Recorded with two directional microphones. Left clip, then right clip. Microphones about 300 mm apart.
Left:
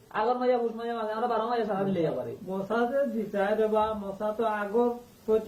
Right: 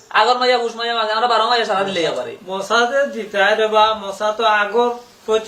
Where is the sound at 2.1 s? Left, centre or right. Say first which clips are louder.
Right 10 dB; centre.